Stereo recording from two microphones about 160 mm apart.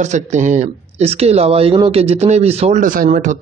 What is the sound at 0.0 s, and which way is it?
Speech, 50° right (ahead or behind).